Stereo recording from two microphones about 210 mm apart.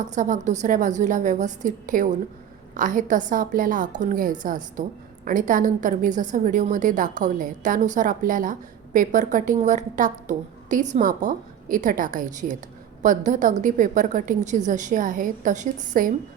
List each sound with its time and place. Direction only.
0.1 s a woman's voice: 35° right (ahead or behind)